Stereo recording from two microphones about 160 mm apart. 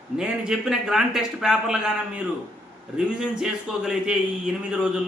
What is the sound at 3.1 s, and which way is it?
A man's voice, 5° right (ahead or behind).